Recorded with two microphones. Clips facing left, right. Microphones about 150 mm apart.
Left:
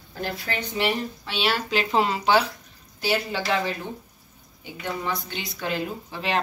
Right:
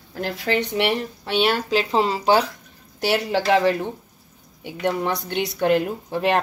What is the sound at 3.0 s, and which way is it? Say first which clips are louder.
A woman's voice: right 5 dB; 75° right (ahead or behind).